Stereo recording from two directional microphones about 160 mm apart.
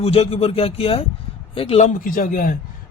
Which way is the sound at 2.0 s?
60° left (ahead or behind).